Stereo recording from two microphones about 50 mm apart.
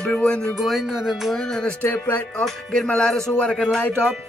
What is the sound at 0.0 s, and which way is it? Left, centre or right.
Speech, left.